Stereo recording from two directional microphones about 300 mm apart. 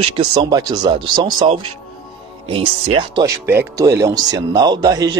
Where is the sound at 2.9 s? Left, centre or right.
Centre.